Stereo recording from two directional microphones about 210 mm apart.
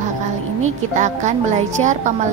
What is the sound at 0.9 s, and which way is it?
A woman's voice, 35° right (ahead or behind).